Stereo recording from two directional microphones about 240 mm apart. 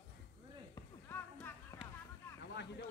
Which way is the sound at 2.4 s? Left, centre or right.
Left.